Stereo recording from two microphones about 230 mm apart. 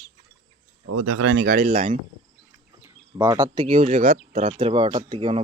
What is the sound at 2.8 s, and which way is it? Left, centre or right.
Speech, centre.